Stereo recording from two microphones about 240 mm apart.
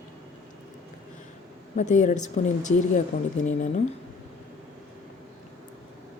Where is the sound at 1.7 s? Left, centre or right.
Left.